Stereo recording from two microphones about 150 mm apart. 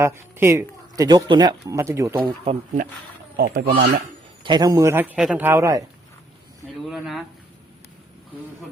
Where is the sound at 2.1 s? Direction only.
35° right (ahead or behind).